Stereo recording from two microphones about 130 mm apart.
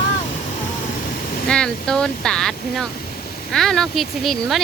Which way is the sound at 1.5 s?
5° left (ahead or behind).